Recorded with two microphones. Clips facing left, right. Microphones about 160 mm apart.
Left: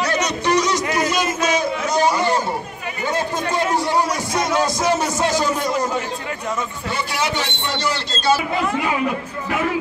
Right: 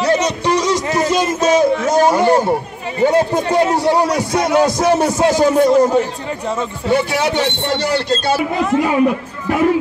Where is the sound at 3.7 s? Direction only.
65° right (ahead or behind).